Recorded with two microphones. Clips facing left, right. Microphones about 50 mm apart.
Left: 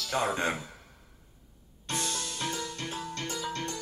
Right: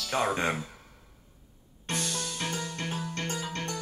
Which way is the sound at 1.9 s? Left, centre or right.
Right.